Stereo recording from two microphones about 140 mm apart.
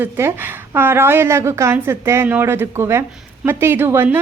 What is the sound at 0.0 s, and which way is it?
A woman's voice, 15° right (ahead or behind).